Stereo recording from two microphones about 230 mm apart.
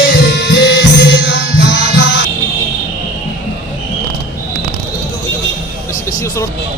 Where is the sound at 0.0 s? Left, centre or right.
Left.